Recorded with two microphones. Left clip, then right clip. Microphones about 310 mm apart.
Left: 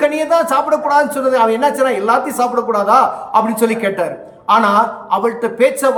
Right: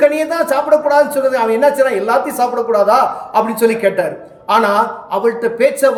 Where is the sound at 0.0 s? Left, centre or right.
Centre.